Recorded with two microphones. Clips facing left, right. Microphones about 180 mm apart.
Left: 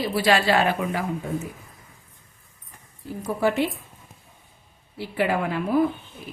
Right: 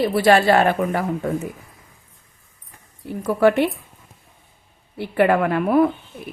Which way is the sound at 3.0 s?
65° right (ahead or behind).